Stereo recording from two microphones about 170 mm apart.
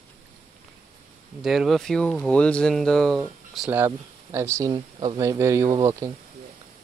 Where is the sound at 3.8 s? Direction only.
15° right (ahead or behind).